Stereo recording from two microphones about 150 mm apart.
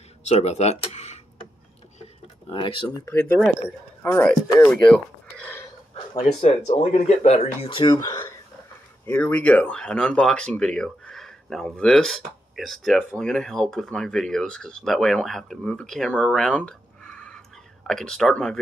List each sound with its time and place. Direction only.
0.2 s speech: 45° left (ahead or behind)
2.5 s speech: 35° left (ahead or behind)
3.1 s speech: 15° left (ahead or behind)
7.0 s speech: 45° left (ahead or behind); by 8.4 s 25° left (ahead or behind)
9.0 s speech: 10° left (ahead or behind)